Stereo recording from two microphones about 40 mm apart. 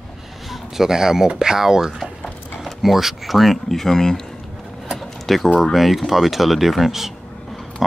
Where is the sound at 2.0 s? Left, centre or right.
Centre.